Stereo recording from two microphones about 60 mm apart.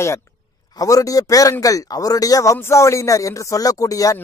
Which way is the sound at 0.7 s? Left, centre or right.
Left.